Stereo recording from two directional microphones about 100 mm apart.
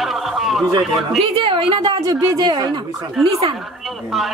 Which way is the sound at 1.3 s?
55° right (ahead or behind).